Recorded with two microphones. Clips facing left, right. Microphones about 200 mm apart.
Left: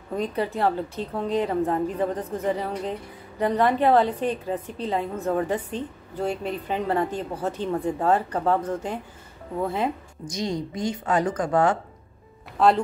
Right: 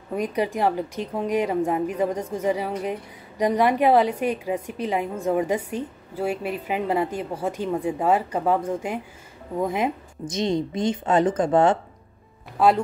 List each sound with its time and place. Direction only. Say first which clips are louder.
0.1 s a woman's voice: right 2 dB; 15° right (ahead or behind)
12.5 s speech: right 1 dB; 5° right (ahead or behind)